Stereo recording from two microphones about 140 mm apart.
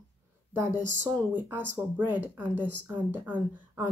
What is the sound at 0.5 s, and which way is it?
Speech, 15° right (ahead or behind).